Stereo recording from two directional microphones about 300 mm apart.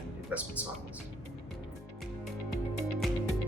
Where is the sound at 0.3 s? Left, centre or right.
Centre.